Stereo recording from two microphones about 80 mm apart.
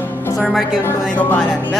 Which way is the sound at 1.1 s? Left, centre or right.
Left.